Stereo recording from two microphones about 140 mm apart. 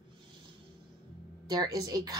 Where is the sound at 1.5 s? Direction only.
30° right (ahead or behind).